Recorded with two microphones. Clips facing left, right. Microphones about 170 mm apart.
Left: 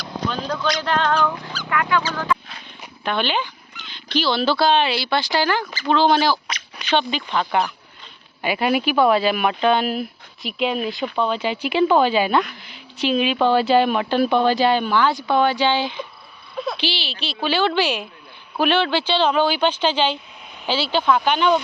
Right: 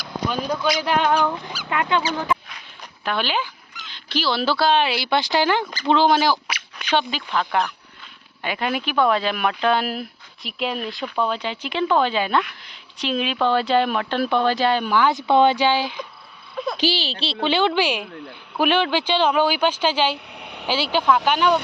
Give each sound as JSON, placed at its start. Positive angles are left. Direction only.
{"t": 0.0, "sound": "fowl", "side_deg": -10}
{"t": 3.0, "sound": "speech", "side_deg": -5}
{"t": 6.1, "sound": "speech", "side_deg": -10}
{"t": 14.8, "sound": "speech", "side_deg": -15}
{"t": 15.6, "sound": "speech", "side_deg": -10}
{"t": 16.7, "sound": "speech", "side_deg": -40}
{"t": 20.3, "sound": "a sound", "side_deg": -70}
{"t": 20.7, "sound": "speech", "side_deg": -10}